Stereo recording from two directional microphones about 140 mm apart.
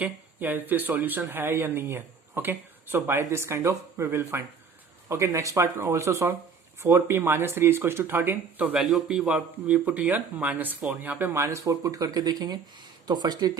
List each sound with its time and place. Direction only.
0.0 s speech: 15° right (ahead or behind); by 13.5 s 30° right (ahead or behind)